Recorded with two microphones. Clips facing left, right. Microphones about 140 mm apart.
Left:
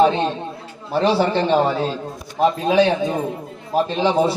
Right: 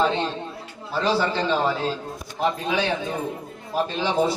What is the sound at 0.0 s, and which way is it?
A man's voice, 55° left (ahead or behind).